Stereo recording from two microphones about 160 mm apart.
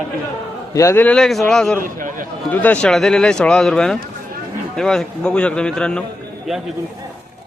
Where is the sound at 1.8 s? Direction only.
55° right (ahead or behind).